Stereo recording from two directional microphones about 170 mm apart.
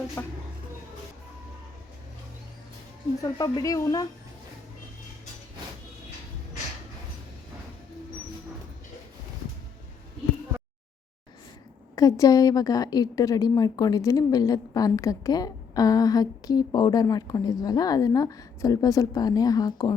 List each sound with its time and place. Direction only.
0.2 s speech: 15° left (ahead or behind)
3.3 s a woman's voice: 25° left (ahead or behind)
11.9 s a woman's voice: 20° left (ahead or behind)